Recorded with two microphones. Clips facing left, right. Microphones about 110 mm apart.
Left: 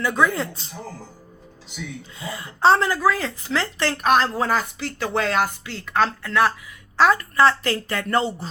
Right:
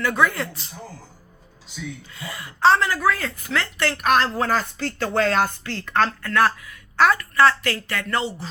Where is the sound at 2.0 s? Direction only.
25° left (ahead or behind).